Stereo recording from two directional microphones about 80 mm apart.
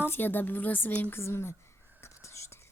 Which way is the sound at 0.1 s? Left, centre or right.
Left.